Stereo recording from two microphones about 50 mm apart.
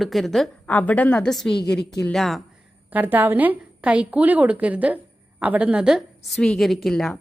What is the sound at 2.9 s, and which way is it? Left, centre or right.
Speech, right.